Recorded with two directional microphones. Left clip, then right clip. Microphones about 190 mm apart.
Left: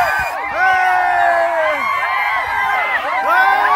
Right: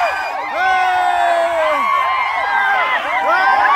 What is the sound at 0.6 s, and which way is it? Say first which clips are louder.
Crowd: left 1 dB; 10° left (ahead or behind).